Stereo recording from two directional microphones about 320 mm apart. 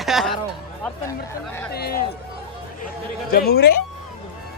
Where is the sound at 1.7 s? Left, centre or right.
Left.